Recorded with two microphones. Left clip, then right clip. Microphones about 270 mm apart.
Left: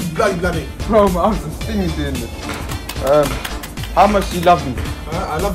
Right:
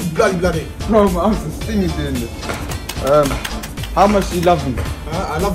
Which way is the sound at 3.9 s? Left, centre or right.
Left.